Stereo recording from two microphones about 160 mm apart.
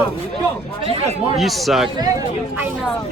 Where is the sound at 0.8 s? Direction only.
35° right (ahead or behind).